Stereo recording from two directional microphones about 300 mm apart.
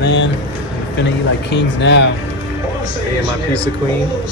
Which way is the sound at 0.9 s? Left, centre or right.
Left.